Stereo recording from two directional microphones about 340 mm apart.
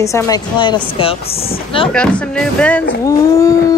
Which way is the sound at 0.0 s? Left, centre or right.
Centre.